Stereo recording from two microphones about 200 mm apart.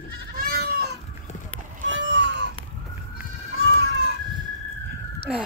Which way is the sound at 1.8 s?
65° right (ahead or behind).